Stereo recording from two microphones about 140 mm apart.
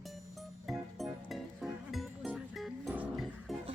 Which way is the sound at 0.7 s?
Centre (ahead or behind).